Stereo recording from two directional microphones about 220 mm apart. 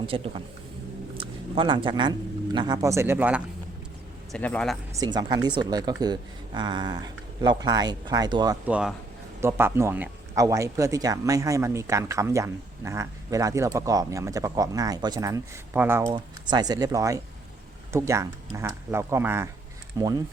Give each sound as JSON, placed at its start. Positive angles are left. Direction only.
{"t": 0.0, "sound": "speech", "side_deg": -25}
{"t": 1.5, "sound": "speech", "side_deg": -20}
{"t": 4.3, "sound": "a man's voice", "side_deg": 5}
{"t": 4.9, "sound": "speech", "side_deg": -20}
{"t": 8.6, "sound": "a man's voice", "side_deg": -5}